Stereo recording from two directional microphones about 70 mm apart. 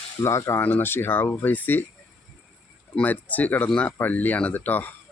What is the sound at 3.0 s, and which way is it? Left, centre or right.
Speech, left.